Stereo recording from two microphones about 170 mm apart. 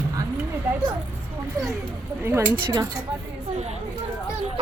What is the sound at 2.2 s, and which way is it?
Speech, 15° right (ahead or behind).